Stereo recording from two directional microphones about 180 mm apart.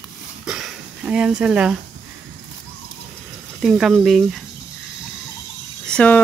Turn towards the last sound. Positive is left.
turn(degrees=5)  # may be behind; listen again after turning